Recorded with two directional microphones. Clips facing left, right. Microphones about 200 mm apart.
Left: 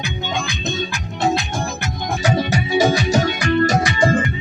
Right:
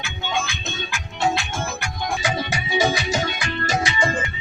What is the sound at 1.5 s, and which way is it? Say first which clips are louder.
Music: left 3 dB; 40° left (ahead or behind).